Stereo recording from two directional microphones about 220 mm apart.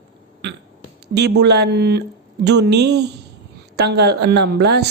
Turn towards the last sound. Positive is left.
turn(degrees=-50)  # may be behind; listen again after turning